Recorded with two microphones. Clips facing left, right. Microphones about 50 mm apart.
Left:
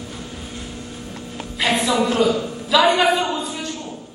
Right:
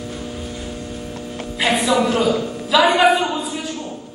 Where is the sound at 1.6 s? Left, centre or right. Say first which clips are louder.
Right 2 dB; centre.